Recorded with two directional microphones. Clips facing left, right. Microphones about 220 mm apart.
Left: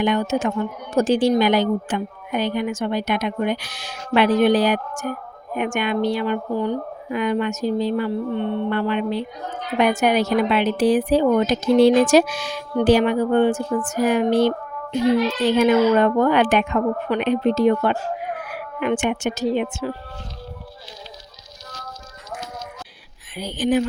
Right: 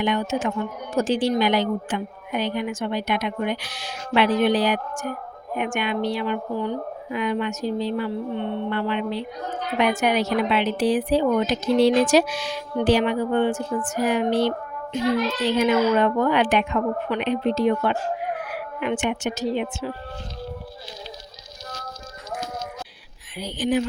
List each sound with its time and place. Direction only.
0.0 s a woman's voice: 45° left (ahead or behind)
18.4 s frog: 50° left (ahead or behind)
23.3 s a woman's voice: 50° left (ahead or behind)